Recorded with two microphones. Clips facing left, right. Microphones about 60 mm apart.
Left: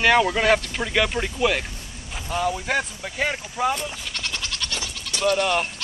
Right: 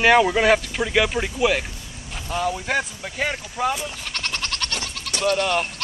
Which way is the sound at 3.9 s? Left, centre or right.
Right.